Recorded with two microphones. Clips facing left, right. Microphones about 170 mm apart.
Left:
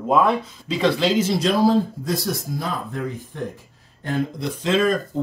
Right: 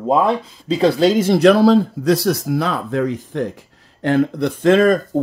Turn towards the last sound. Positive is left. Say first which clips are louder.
# right 7 dB
turn(degrees=-55)  # may be behind; listen again after turning